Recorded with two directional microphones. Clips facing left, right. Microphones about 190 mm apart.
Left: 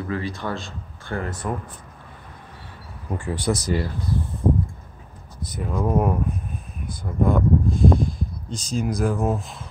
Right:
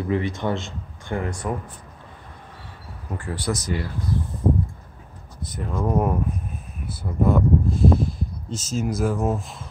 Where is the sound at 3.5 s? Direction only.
35° left (ahead or behind).